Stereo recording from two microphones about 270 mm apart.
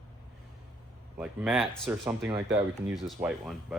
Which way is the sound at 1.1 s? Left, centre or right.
Centre.